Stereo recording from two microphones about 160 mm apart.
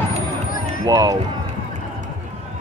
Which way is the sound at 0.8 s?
20° right (ahead or behind).